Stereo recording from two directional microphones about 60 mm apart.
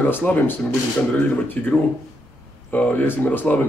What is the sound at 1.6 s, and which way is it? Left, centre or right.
Speech, left.